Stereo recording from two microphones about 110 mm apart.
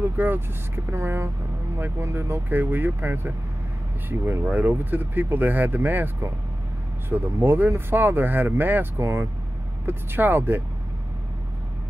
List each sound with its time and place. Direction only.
0.2 s speech: 20° right (ahead or behind)